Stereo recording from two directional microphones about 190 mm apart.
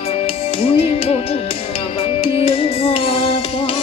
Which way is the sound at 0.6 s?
30° left (ahead or behind).